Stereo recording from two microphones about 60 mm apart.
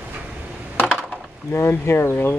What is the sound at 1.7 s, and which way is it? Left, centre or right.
Speech, left.